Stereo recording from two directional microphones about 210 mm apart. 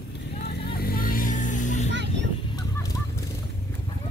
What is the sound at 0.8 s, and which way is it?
Vehicle, 45° left (ahead or behind).